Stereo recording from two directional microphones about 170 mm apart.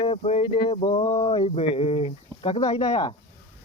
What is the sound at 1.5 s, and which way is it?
Speech, 35° left (ahead or behind).